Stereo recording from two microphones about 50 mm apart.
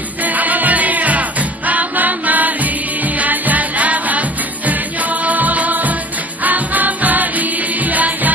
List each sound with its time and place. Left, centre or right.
0.2 s music: right